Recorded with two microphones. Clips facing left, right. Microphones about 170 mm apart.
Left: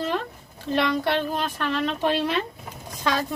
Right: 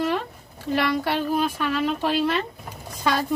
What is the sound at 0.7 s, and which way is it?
Speech, 5° right (ahead or behind).